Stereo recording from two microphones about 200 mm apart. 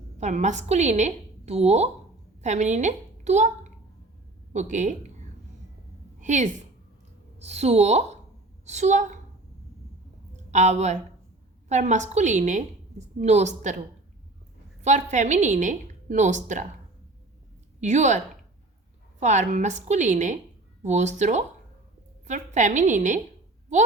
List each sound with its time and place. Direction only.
0.2 s a woman's voice: 35° right (ahead or behind)
6.1 s a woman's voice: 40° right (ahead or behind)
10.5 s a woman's voice: 35° right (ahead or behind)
17.7 s a woman's voice: 35° right (ahead or behind)
19.2 s a woman's voice: 35° right (ahead or behind)